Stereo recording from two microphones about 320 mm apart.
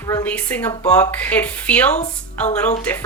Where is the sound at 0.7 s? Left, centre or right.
Centre.